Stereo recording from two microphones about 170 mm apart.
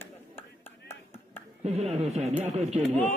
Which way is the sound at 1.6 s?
40° right (ahead or behind).